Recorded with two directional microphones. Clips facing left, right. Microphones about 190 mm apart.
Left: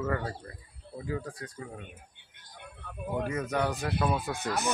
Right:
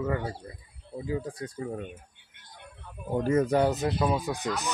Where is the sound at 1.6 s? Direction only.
40° right (ahead or behind).